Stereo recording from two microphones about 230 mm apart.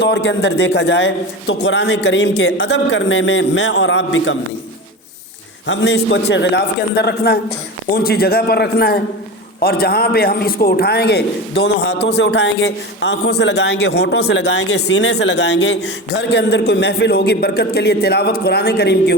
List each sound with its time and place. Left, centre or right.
0.0 s a man's voice: left
5.6 s a man's voice: left